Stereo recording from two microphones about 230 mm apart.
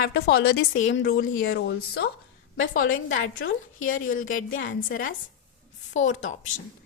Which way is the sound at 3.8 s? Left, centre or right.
Left.